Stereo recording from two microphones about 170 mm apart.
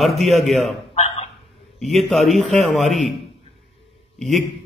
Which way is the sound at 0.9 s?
35° left (ahead or behind).